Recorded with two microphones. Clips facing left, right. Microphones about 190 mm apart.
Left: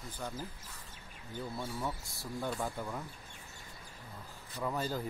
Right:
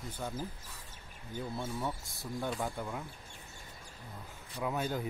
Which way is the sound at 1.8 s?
Centre (ahead or behind).